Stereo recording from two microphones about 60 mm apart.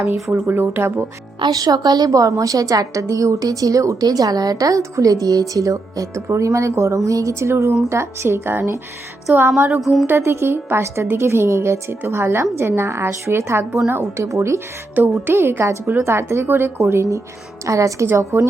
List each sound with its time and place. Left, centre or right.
0.3 s a woman's voice: right
0.5 s speech: right
1.5 s a woman's voice: right
9.3 s speech: right
9.8 s a woman's voice: centre
10.1 s a woman's voice: right
14.9 s speech: right
15.3 s a woman's voice: right
17.7 s a woman's voice: right